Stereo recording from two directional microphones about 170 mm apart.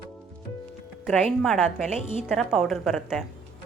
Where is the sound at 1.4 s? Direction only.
Centre (ahead or behind).